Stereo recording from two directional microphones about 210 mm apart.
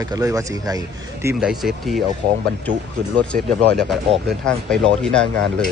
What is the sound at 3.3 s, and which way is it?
Speech, 40° right (ahead or behind).